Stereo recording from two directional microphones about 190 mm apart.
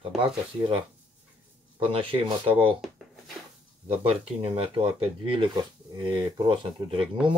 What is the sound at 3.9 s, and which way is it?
Speech, 30° right (ahead or behind).